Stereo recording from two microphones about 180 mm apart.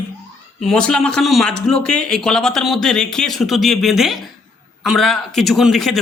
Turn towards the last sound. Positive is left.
turn(degrees=0)  # may be behind; listen again after turning